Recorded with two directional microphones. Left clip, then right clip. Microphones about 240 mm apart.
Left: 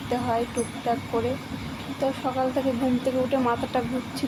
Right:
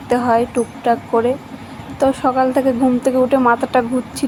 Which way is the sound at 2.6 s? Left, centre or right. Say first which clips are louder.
Right 10 dB; right.